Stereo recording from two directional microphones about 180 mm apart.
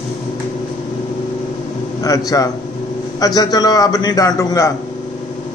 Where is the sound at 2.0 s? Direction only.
20° left (ahead or behind).